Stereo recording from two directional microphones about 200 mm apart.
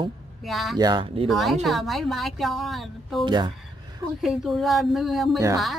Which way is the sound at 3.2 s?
25° right (ahead or behind).